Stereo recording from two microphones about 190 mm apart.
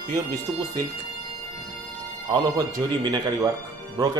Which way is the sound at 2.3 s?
20° right (ahead or behind).